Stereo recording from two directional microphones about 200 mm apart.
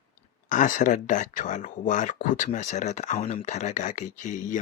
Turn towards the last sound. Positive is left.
turn(degrees=40)  # may be behind; listen again after turning